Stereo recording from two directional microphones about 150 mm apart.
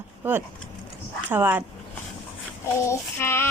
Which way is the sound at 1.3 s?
10° right (ahead or behind).